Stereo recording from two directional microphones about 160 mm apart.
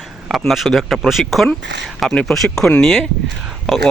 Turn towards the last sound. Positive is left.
turn(degrees=0)  # may be behind; listen again after turning